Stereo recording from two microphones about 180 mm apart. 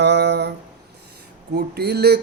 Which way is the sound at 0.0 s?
70° right (ahead or behind).